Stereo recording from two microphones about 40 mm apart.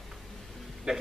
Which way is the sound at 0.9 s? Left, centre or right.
Centre.